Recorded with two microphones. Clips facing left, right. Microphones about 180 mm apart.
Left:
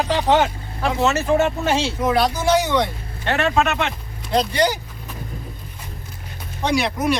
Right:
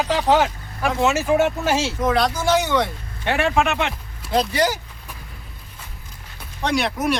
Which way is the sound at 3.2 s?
10° right (ahead or behind).